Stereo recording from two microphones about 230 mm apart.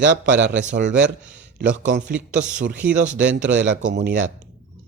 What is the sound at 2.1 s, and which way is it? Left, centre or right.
Speech, centre.